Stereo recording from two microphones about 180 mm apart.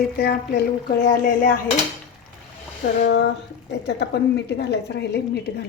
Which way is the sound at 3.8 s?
65° left (ahead or behind).